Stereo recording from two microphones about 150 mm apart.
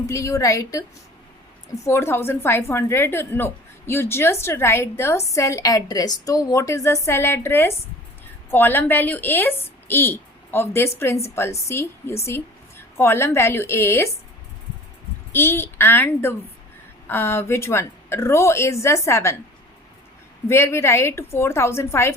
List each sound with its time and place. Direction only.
0.1 s a woman's voice: 20° left (ahead or behind)
15.3 s a woman's voice: 15° left (ahead or behind)
20.5 s a woman's voice: 20° left (ahead or behind)